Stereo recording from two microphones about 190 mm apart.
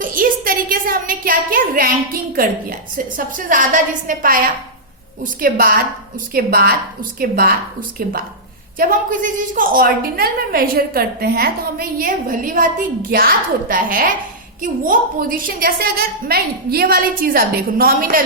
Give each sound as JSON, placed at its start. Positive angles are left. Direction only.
{"t": 0.0, "sound": "a woman's voice", "side_deg": -45}